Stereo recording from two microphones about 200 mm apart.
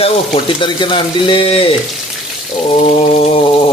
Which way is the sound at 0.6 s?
25° left (ahead or behind).